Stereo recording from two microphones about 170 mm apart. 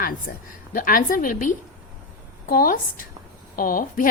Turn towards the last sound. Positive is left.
turn(degrees=55)  # may be behind; listen again after turning